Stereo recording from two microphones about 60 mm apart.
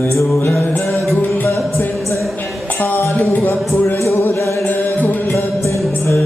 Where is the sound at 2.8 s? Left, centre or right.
Left.